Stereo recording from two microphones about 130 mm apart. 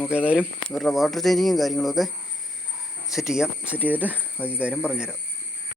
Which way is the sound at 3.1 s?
5° right (ahead or behind).